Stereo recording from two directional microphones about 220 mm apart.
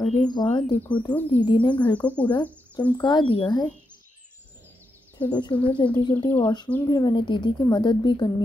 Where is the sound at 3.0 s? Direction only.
20° left (ahead or behind).